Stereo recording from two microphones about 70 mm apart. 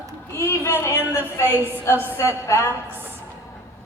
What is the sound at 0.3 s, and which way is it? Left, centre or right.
A woman's voice, left.